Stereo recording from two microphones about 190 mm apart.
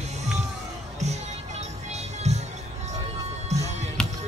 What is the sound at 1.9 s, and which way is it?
Music, 35° right (ahead or behind).